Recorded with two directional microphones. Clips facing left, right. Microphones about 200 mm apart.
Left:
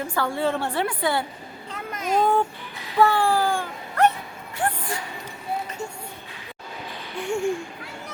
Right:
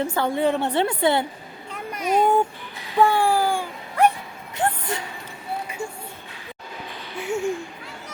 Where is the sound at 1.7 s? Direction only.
10° right (ahead or behind).